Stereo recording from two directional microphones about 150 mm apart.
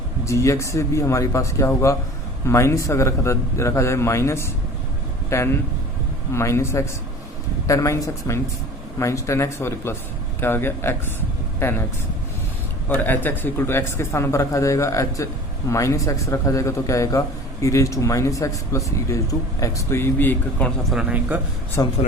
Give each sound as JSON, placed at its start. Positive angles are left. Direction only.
{"t": 0.3, "sound": "a man's voice", "side_deg": 20}
{"t": 12.9, "sound": "a man's voice", "side_deg": 15}
{"t": 20.9, "sound": "speech", "side_deg": -10}
{"t": 21.8, "sound": "a man's voice", "side_deg": 25}